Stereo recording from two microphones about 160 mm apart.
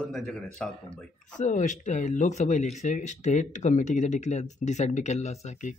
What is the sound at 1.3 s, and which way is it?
Speech, 50° left (ahead or behind).